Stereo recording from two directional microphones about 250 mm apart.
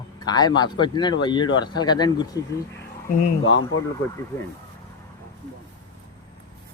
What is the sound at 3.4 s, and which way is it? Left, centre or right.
Speech, left.